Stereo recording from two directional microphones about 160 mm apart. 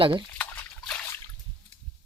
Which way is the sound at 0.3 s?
10° left (ahead or behind).